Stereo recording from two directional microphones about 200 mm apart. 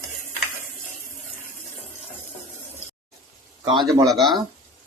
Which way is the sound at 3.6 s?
25° right (ahead or behind).